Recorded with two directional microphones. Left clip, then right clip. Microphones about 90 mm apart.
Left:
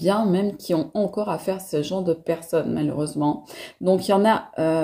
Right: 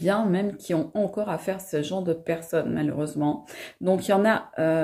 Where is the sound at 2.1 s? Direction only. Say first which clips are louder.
Left 3 dB; 30° left (ahead or behind).